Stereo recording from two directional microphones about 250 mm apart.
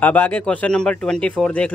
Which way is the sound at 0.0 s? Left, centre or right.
Centre.